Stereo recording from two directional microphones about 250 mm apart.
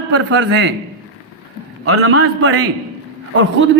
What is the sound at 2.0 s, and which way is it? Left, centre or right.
Speech, right.